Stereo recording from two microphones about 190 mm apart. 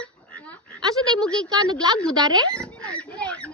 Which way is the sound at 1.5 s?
20° right (ahead or behind).